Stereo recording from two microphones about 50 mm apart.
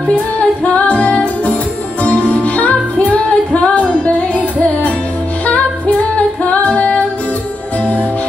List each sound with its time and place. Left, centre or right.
0.7 s music: left
6.7 s music: left